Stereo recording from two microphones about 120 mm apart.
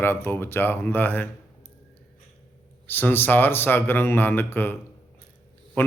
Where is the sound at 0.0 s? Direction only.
20° left (ahead or behind).